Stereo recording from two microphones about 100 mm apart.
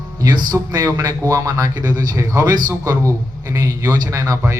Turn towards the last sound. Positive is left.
turn(degrees=-35)  # may be behind; listen again after turning